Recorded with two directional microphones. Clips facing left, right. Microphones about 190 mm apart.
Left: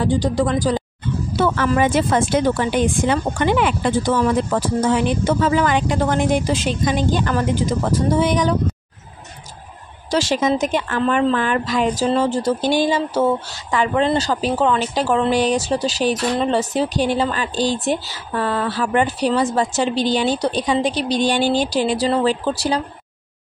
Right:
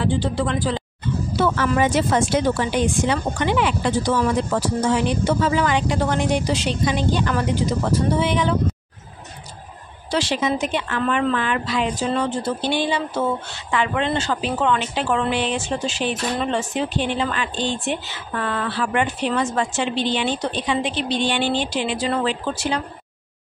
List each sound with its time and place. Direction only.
0.0 s speech: 40° left (ahead or behind)
10.1 s speech: 45° left (ahead or behind)